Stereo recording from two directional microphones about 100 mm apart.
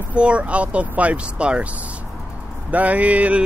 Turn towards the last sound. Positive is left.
turn(degrees=-15)  # may be behind; listen again after turning